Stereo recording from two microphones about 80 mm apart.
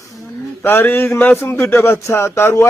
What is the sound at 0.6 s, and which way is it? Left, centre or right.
Speech, left.